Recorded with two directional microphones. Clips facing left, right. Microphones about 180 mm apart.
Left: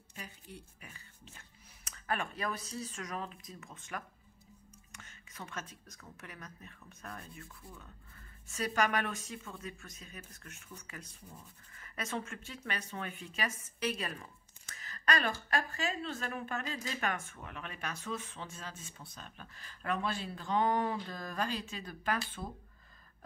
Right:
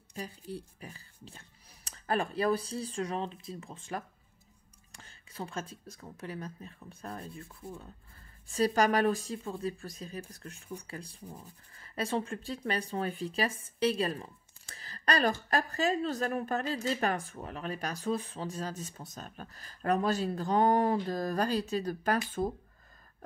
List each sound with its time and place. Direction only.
0.1 s speech: 35° right (ahead or behind)